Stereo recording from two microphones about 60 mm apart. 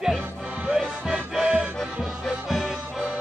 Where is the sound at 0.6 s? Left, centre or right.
Centre.